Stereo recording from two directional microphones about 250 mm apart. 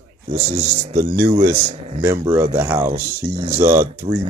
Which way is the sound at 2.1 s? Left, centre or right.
Centre.